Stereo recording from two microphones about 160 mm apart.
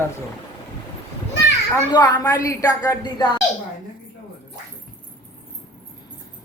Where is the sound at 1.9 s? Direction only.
25° left (ahead or behind).